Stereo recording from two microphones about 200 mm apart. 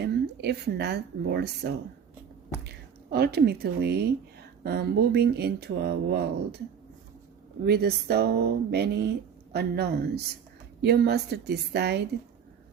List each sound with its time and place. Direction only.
0.0 s speech: 55° right (ahead or behind)
3.1 s speech: 55° right (ahead or behind)
7.6 s a woman's voice: 55° right (ahead or behind)